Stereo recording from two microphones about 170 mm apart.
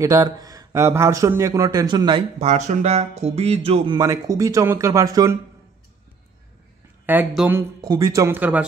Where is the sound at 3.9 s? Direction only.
20° right (ahead or behind).